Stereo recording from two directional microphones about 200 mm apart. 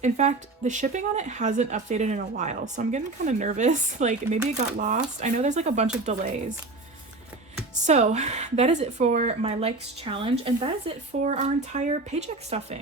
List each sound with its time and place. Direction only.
0.0 s speech: 35° right (ahead or behind)
7.9 s speech: 35° right (ahead or behind)